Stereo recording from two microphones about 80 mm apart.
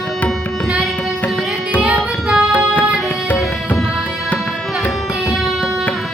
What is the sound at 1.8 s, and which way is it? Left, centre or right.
Music, centre.